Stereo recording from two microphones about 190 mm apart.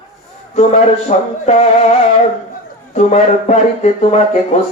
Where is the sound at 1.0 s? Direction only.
35° left (ahead or behind).